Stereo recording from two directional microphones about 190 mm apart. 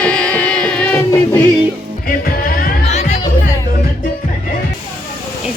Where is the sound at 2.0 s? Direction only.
50° left (ahead or behind).